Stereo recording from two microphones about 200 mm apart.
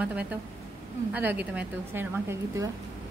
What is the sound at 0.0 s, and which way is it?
A woman's voice, 5° right (ahead or behind).